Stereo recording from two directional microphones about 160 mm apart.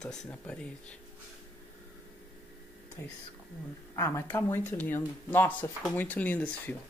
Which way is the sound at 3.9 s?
15° left (ahead or behind).